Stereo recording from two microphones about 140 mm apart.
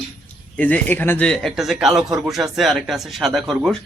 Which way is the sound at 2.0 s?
25° right (ahead or behind).